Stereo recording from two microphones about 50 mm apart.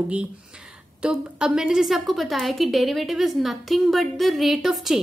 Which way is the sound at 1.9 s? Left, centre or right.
Centre.